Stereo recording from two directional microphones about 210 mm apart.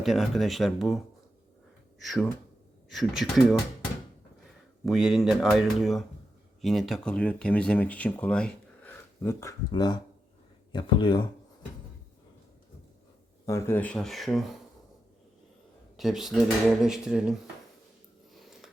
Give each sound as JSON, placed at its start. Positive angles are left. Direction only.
{"t": 0.0, "sound": "speech", "side_deg": 0}
{"t": 2.0, "sound": "speech", "side_deg": 0}
{"t": 4.9, "sound": "speech", "side_deg": 0}
{"t": 13.4, "sound": "speech", "side_deg": 15}
{"t": 16.0, "sound": "speech", "side_deg": 0}